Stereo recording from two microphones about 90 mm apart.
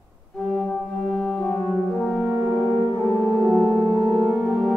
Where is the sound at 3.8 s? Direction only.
45° right (ahead or behind).